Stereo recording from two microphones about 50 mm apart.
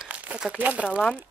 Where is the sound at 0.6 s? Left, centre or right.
Right.